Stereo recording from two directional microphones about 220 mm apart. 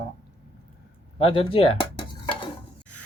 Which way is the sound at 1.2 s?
25° left (ahead or behind).